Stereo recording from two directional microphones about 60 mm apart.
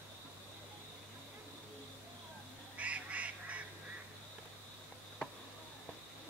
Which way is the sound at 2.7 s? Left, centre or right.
Right.